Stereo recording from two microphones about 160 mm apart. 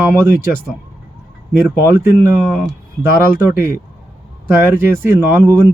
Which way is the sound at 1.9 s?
15° right (ahead or behind).